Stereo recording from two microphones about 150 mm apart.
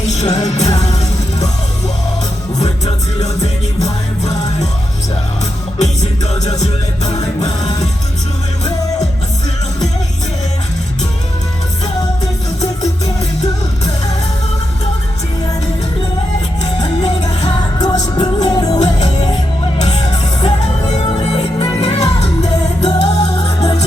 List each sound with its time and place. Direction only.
0.0 s music: 50° left (ahead or behind)
2.6 s music: 45° left (ahead or behind)
5.8 s music: 50° left (ahead or behind)
17.2 s music: 25° left (ahead or behind)
18.8 s music: 50° left (ahead or behind)